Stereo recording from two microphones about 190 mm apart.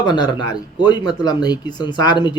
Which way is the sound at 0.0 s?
25° left (ahead or behind).